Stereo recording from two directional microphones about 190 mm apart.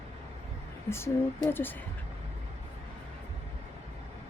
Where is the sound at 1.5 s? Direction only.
10° left (ahead or behind).